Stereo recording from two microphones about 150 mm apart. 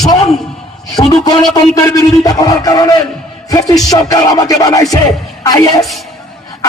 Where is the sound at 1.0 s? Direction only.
25° left (ahead or behind).